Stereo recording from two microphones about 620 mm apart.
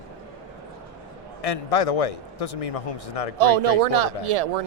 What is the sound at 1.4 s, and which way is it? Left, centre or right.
Speech, left.